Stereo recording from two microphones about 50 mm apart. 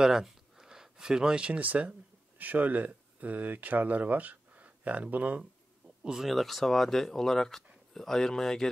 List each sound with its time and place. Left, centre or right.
0.0 s a sound: centre
1.6 s speech: right
6.0 s speech: centre